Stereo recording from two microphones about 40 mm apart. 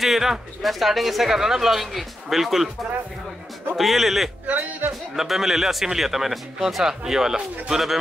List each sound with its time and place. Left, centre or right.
0.0 s speech: centre
3.7 s speech: centre
4.5 s speech: right
5.1 s speech: centre